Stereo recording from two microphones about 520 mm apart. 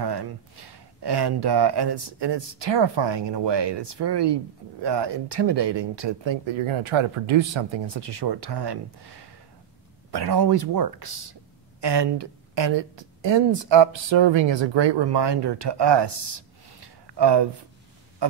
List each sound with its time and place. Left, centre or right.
0.0 s a woman's voice: right